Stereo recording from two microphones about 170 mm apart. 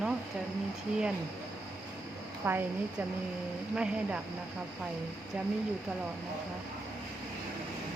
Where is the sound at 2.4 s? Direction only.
15° right (ahead or behind).